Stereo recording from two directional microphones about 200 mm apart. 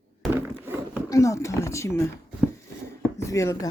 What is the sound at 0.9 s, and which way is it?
Speech, 15° left (ahead or behind).